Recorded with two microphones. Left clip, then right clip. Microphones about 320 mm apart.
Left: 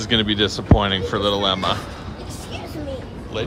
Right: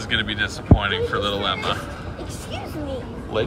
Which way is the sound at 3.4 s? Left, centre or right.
Centre.